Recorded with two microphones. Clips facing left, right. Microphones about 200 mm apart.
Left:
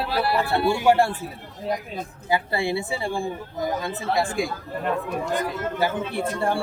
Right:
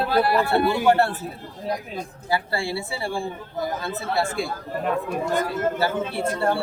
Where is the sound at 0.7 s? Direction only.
10° left (ahead or behind).